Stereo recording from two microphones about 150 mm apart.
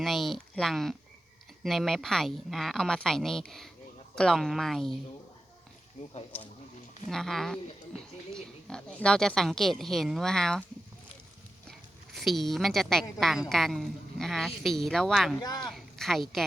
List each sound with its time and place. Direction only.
0.0 s a woman's voice: centre (ahead or behind)
7.1 s a woman's voice: centre (ahead or behind)
11.7 s a woman's voice: centre (ahead or behind)
15.4 s speech: 30° left (ahead or behind)
15.6 s speech: centre (ahead or behind)